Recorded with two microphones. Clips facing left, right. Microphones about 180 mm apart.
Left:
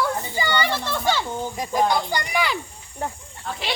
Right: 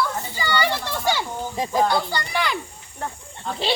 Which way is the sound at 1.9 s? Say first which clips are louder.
Even; 15° left (ahead or behind).